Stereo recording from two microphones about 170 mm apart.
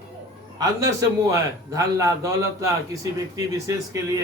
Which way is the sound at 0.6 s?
20° right (ahead or behind).